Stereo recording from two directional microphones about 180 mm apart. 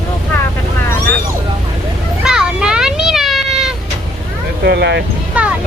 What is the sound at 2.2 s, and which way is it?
Children playing, 5° right (ahead or behind).